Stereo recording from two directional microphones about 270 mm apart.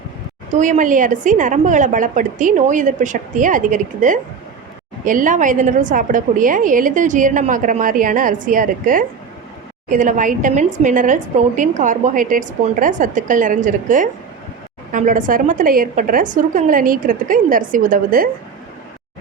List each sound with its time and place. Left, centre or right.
0.5 s a woman's voice: right